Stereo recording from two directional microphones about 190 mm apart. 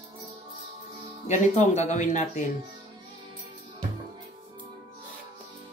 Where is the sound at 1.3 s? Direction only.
40° left (ahead or behind).